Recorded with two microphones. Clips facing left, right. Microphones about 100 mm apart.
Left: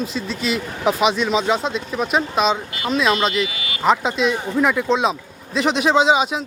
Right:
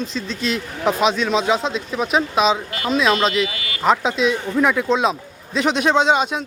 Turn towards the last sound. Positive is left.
turn(degrees=0)  # may be behind; listen again after turning